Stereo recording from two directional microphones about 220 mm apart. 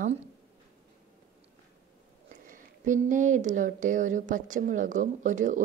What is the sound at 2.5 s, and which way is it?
A woman's voice, 35° right (ahead or behind).